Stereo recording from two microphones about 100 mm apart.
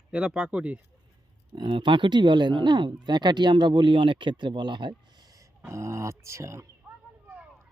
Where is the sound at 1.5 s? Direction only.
50° right (ahead or behind); by 6.9 s 30° right (ahead or behind).